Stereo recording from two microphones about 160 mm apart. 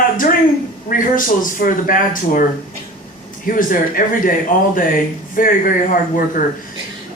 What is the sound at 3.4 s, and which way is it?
Speech, 60° left (ahead or behind).